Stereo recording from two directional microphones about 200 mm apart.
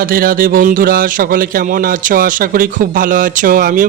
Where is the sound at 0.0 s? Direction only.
45° right (ahead or behind).